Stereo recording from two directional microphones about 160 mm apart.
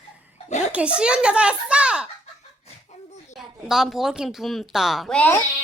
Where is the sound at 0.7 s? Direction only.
5° right (ahead or behind).